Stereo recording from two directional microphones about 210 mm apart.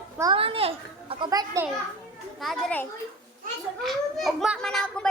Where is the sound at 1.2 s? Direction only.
15° right (ahead or behind).